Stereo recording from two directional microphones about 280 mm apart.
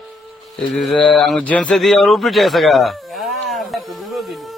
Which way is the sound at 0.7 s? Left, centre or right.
Centre.